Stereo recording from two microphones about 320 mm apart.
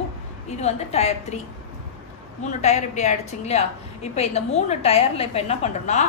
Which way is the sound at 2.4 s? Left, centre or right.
Left.